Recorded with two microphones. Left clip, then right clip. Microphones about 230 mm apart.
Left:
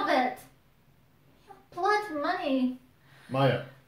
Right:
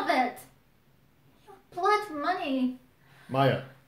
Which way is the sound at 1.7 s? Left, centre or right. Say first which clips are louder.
Right 1 dB; centre.